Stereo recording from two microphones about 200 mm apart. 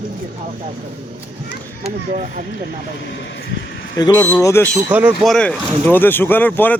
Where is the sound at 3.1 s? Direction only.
60° left (ahead or behind).